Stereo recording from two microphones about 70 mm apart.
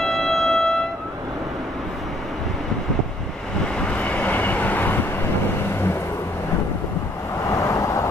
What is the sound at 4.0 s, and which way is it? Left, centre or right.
Vehicle, left.